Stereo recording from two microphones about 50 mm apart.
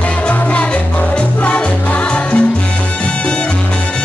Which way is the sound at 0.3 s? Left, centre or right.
Left.